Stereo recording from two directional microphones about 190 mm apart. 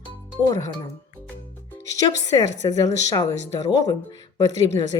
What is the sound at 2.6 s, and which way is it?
A woman's voice, 20° left (ahead or behind).